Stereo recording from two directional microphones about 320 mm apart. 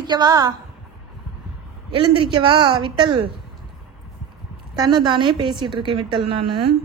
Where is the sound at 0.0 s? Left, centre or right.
Centre.